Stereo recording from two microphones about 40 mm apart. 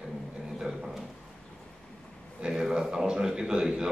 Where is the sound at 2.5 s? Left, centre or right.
Centre.